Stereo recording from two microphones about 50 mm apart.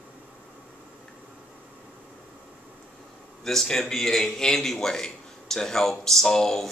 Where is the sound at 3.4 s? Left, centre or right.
Centre.